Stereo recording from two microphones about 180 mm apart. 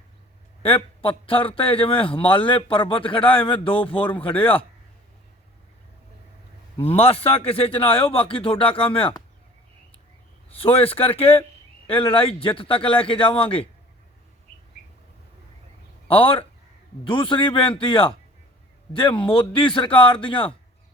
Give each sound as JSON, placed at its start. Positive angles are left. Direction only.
{"t": 0.6, "sound": "a man's voice", "side_deg": 30}
{"t": 3.9, "sound": "speech", "side_deg": 10}
{"t": 6.8, "sound": "a man's voice", "side_deg": 30}
{"t": 10.6, "sound": "a man's voice", "side_deg": 30}
{"t": 16.0, "sound": "a man's voice", "side_deg": 30}